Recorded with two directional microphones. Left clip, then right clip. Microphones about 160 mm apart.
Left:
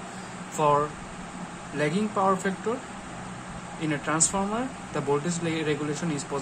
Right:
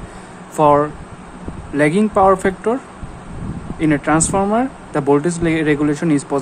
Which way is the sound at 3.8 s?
40° right (ahead or behind).